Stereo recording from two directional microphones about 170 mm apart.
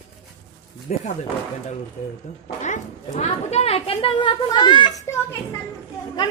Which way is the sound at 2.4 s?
50° left (ahead or behind).